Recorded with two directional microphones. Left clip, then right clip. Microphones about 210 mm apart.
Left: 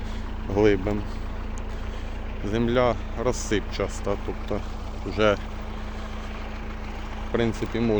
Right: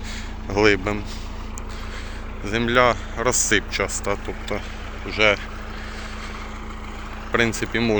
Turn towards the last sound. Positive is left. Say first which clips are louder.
# right 4 dB
turn(degrees=0)  # may be behind; listen again after turning